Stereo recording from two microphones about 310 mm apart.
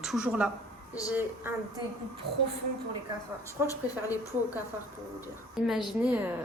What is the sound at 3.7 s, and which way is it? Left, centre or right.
Speech, centre.